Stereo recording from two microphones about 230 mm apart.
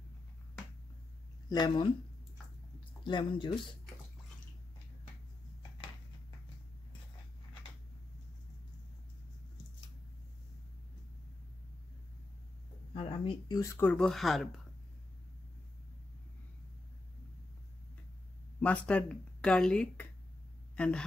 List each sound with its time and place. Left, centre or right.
1.5 s speech: centre
3.0 s speech: centre
12.9 s speech: left; by 14.6 s centre
18.6 s speech: centre